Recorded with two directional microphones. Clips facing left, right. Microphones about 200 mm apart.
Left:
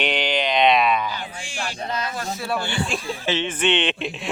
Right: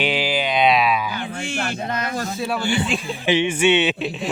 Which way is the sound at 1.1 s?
55° right (ahead or behind).